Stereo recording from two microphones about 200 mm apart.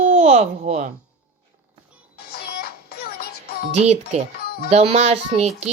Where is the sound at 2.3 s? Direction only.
50° left (ahead or behind).